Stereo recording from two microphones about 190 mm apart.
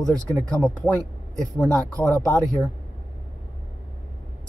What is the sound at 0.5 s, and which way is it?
Speech, centre (ahead or behind).